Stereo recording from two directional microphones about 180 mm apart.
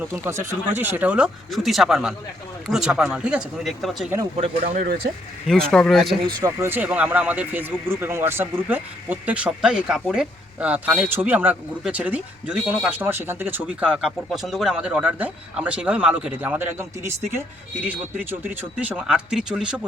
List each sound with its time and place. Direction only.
0.0 s speech: 15° right (ahead or behind)
4.4 s speech: 35° right (ahead or behind)
5.5 s speech: 5° left (ahead or behind)
6.2 s speech: 15° right (ahead or behind)